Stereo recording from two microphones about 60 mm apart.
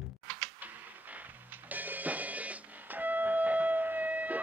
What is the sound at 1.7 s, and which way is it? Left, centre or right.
Music, right.